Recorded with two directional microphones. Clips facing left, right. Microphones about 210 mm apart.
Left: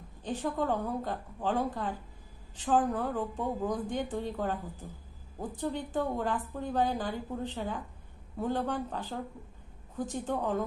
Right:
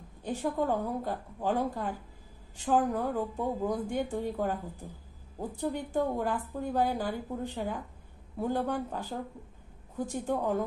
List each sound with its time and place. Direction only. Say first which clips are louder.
0.2 s speech: right 1 dB; 10° right (ahead or behind)